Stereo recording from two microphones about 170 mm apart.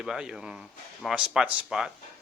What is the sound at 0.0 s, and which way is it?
Speech, 5° right (ahead or behind).